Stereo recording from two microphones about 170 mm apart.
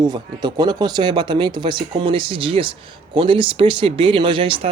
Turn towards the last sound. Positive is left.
turn(degrees=-30)  # may be behind; listen again after turning